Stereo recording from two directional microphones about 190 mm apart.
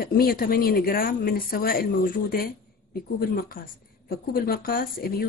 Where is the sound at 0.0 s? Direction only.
50° left (ahead or behind).